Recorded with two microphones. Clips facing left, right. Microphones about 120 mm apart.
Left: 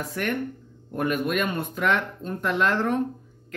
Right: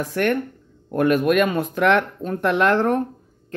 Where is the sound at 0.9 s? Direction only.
90° right; by 3.0 s 50° right (ahead or behind).